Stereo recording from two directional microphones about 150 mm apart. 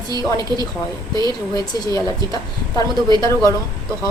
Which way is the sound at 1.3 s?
25° left (ahead or behind).